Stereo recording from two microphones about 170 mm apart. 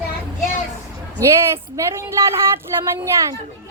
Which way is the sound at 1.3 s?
15° right (ahead or behind).